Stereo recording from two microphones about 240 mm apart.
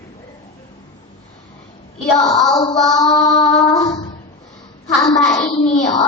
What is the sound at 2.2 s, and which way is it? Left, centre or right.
Speech, centre.